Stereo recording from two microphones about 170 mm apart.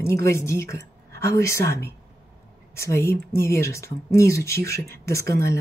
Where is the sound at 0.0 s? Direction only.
15° left (ahead or behind).